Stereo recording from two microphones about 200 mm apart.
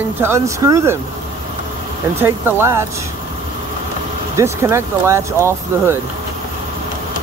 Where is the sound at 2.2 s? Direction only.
10° right (ahead or behind).